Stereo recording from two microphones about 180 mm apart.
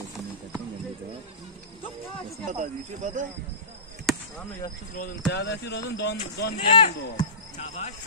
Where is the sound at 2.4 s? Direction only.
45° right (ahead or behind).